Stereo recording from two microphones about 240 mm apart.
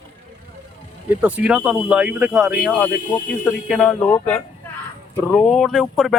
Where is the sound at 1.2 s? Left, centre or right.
Centre.